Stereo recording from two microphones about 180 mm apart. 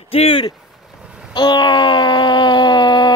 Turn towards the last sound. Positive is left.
turn(degrees=25)  # may be behind; listen again after turning